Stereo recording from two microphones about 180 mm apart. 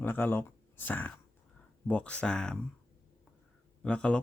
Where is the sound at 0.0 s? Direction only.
10° left (ahead or behind).